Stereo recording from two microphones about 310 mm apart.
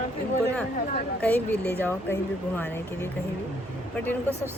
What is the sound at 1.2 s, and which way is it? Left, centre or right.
Speech, centre.